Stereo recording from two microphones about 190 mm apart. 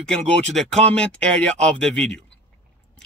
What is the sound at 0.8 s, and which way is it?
A man's voice, 5° left (ahead or behind).